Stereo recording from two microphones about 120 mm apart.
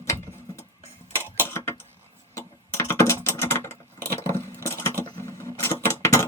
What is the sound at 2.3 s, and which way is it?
Typing, 25° left (ahead or behind).